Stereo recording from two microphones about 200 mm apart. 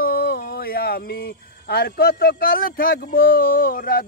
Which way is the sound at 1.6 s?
50° left (ahead or behind).